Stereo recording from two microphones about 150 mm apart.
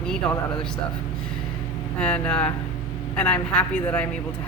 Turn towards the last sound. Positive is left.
turn(degrees=10)  # may be behind; listen again after turning